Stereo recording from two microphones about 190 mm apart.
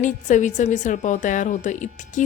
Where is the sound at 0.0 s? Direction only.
40° left (ahead or behind).